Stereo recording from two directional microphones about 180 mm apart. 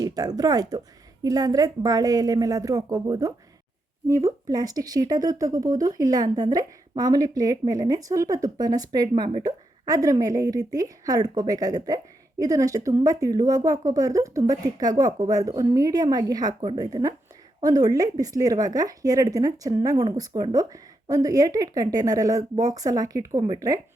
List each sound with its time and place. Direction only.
0.0 s speech: 20° right (ahead or behind)